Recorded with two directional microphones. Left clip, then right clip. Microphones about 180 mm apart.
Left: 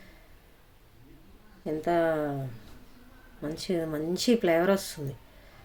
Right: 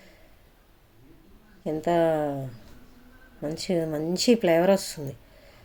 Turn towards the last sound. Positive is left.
turn(degrees=-10)  # may be behind; listen again after turning